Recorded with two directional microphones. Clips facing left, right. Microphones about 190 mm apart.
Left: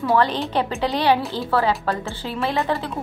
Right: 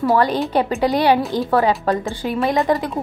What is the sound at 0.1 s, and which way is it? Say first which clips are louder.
A woman's voice: right 1 dB; 10° right (ahead or behind).